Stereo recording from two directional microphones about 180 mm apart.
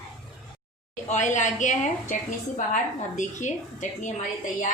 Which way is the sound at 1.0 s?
40° left (ahead or behind).